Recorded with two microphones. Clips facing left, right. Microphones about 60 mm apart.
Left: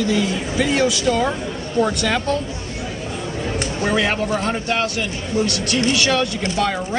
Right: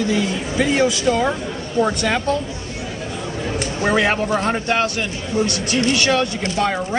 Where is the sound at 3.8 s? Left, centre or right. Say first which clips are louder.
Right 2 dB; right.